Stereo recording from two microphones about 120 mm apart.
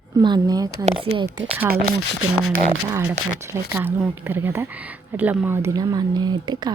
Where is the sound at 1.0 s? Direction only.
45° right (ahead or behind).